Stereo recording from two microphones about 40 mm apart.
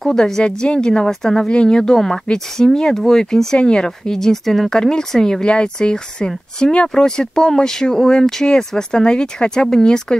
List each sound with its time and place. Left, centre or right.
0.0 s speech: centre
1.5 s speech: left
2.0 s speech: centre
3.5 s speech: left